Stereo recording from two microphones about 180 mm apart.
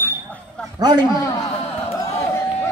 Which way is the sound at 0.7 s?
20° right (ahead or behind).